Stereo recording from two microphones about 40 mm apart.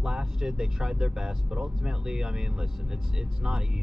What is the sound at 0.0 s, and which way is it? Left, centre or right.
Speech, centre.